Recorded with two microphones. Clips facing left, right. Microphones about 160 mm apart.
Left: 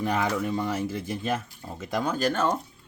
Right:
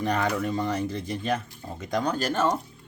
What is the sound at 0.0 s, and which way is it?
Speech, 5° left (ahead or behind).